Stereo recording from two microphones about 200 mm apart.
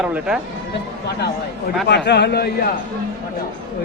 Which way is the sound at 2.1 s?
55° left (ahead or behind).